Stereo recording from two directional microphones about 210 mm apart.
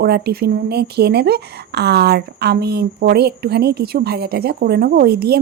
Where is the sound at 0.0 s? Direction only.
50° right (ahead or behind).